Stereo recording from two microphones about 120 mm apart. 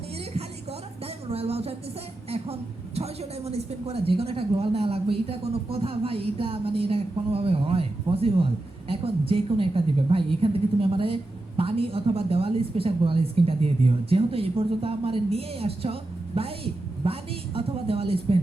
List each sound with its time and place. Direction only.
1.3 s a woman's voice: 55° right (ahead or behind)